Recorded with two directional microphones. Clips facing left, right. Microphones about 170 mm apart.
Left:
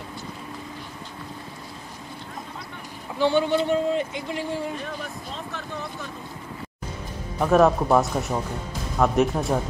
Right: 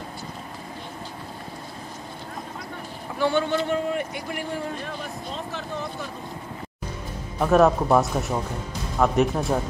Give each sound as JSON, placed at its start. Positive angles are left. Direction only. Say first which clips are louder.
{"t": 3.2, "sound": "a man's voice", "louder": "left 2 dB", "side_deg": 15}
{"t": 7.3, "sound": "speech", "louder": "even", "side_deg": 0}